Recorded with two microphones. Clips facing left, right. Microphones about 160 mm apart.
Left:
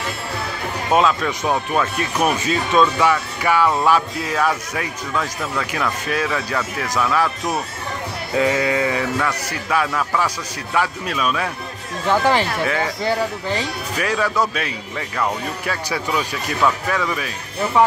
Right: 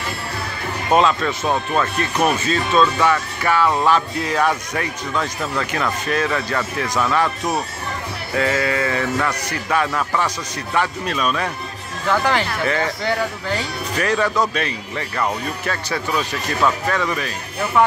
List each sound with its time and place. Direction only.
0.9 s speech: 5° left (ahead or behind)
8.4 s bleat: 15° left (ahead or behind)
9.2 s speech: 5° left (ahead or behind)
13.9 s speech: 5° left (ahead or behind)